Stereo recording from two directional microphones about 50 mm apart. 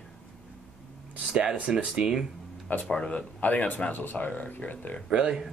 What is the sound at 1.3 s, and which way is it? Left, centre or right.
Speech, centre.